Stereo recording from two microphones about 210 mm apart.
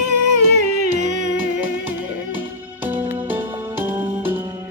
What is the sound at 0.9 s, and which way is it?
Music, 35° right (ahead or behind).